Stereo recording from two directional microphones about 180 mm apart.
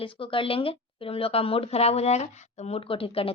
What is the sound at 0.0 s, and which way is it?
Speech, 30° left (ahead or behind).